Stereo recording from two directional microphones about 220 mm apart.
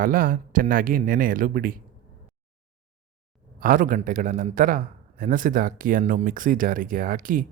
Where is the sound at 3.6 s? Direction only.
40° right (ahead or behind).